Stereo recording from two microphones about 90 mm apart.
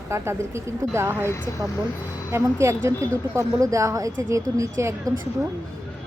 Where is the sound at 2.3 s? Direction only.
30° right (ahead or behind).